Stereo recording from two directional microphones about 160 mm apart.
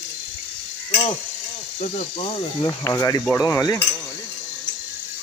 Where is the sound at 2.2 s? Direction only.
35° left (ahead or behind).